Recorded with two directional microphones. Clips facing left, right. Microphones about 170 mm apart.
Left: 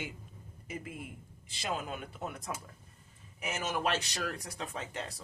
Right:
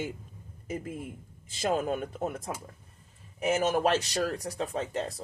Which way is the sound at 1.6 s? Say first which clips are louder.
Right 9 dB; 45° right (ahead or behind).